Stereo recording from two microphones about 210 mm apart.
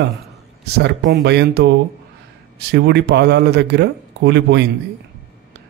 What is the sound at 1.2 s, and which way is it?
Speech, 50° right (ahead or behind).